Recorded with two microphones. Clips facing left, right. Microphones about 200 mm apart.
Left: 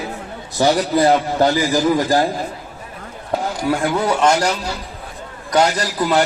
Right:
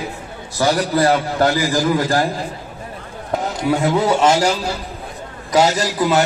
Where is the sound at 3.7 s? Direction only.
25° right (ahead or behind).